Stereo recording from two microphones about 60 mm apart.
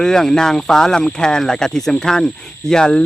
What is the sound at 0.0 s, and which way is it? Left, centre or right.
Speech, centre.